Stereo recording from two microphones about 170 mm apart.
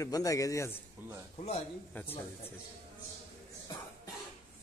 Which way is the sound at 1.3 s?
35° left (ahead or behind).